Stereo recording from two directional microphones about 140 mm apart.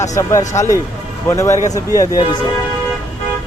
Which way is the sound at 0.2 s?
20° left (ahead or behind).